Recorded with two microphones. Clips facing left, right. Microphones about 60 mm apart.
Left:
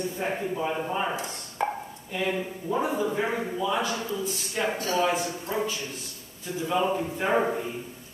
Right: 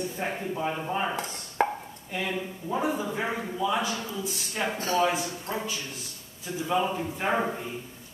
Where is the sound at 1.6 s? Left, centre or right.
Right.